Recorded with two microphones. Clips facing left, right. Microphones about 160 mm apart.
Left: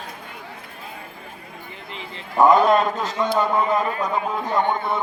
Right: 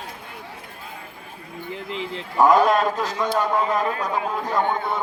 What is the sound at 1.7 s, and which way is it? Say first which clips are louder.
Speech: right 9 dB; 90° right.